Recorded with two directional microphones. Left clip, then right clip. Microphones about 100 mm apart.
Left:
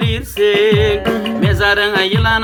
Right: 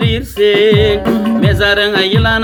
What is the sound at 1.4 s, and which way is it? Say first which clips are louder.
Music: right 2 dB; 45° left (ahead or behind).